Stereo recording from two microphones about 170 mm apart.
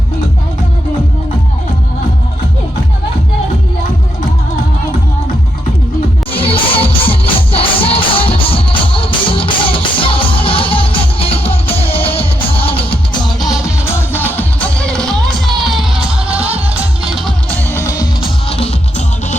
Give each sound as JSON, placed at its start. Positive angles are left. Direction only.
{"t": 6.3, "sound": "music", "side_deg": 35}
{"t": 13.7, "sound": "music", "side_deg": 15}
{"t": 17.7, "sound": "music", "side_deg": 15}
{"t": 18.4, "sound": "music", "side_deg": 35}